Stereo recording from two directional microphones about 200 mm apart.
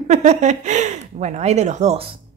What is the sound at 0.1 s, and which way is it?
A woman's voice, 35° right (ahead or behind).